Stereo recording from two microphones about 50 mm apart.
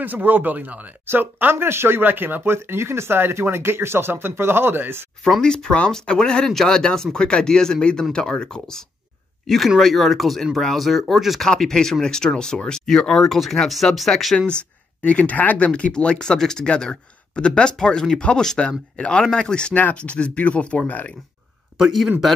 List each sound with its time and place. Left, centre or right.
0.0 s speech: right
1.0 s speech: right
2.0 s speech: right
5.2 s speech: centre
9.8 s speech: centre
11.4 s speech: centre
14.5 s speech: left
19.7 s speech: left
21.7 s speech: centre